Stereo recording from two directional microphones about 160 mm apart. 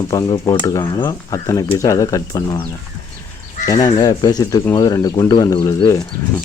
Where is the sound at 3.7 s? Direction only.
25° left (ahead or behind).